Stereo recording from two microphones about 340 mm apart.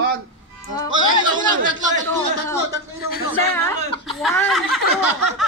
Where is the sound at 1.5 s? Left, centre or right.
Right.